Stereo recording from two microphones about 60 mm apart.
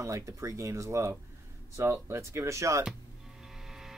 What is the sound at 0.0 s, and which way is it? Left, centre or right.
Speech, right.